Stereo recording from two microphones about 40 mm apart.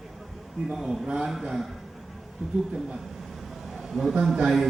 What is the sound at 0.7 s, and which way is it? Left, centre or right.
Speech, centre.